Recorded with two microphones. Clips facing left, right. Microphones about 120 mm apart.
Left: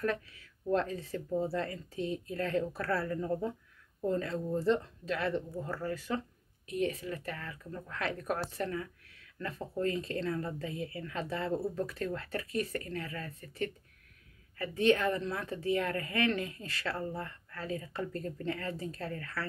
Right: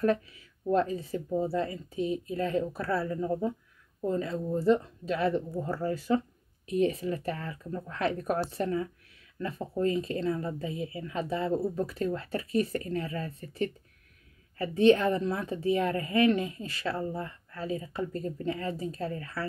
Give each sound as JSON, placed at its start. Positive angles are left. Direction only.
{"t": 0.0, "sound": "a woman's voice", "side_deg": -20}